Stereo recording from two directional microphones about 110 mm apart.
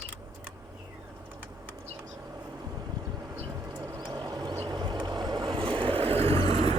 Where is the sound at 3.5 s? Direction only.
30° right (ahead or behind).